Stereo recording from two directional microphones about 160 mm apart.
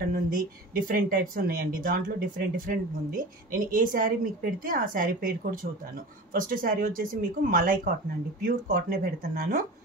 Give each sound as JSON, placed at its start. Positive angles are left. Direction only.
{"t": 0.1, "sound": "speech", "side_deg": -60}